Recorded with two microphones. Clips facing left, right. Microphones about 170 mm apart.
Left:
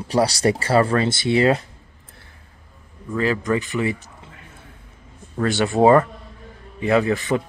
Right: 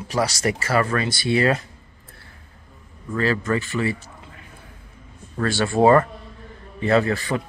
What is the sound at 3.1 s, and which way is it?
Speech, 15° left (ahead or behind).